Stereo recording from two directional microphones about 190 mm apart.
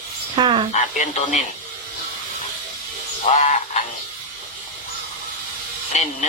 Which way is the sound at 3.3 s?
40° left (ahead or behind).